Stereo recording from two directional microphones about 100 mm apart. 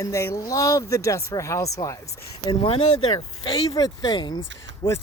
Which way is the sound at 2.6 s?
70° left (ahead or behind).